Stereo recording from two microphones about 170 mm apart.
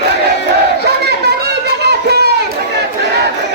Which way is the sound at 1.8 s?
75° right (ahead or behind).